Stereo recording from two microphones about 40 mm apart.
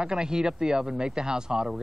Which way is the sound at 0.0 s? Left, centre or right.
Centre.